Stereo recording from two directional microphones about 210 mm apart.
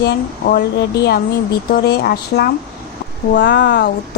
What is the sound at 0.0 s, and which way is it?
Speech, 45° left (ahead or behind).